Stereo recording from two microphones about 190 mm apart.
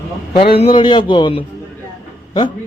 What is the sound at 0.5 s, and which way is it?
Speech, 25° left (ahead or behind).